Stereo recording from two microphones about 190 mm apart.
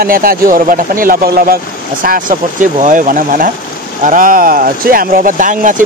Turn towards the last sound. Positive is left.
turn(degrees=-45)  # may be behind; listen again after turning